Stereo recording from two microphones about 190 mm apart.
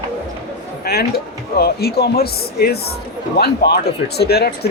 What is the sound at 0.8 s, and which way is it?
A man's voice, 55° left (ahead or behind).